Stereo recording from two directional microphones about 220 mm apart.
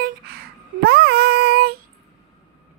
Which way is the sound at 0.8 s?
45° right (ahead or behind).